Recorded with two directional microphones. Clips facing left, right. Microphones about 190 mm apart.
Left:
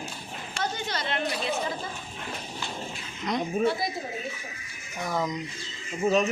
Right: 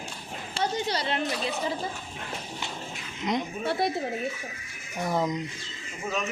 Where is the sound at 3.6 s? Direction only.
60° right (ahead or behind).